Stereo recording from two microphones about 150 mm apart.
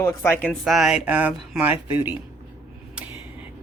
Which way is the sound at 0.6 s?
Centre (ahead or behind).